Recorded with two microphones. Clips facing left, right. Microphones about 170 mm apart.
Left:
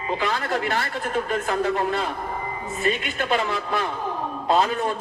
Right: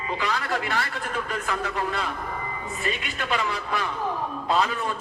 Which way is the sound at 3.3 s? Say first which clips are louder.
Left 3 dB; 45° left (ahead or behind).